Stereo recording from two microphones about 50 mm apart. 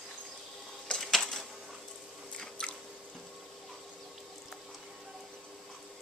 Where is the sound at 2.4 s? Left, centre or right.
Centre.